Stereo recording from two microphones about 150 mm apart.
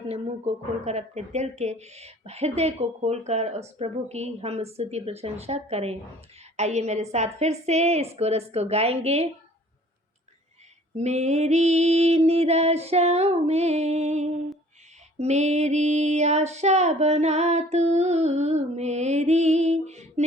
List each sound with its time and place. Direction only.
0.1 s speech: 45° right (ahead or behind)
10.9 s speech: 50° right (ahead or behind)